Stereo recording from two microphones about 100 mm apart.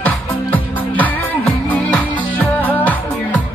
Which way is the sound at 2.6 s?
15° left (ahead or behind).